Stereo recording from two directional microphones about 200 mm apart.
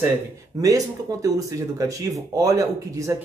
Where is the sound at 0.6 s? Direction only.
15° right (ahead or behind).